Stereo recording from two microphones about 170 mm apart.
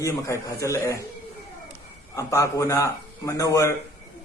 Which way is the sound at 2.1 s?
15° left (ahead or behind).